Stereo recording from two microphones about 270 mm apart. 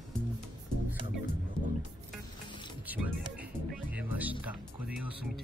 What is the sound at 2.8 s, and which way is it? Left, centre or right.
Music, centre.